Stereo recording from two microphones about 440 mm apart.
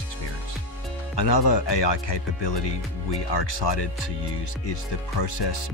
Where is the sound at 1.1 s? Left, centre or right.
Left.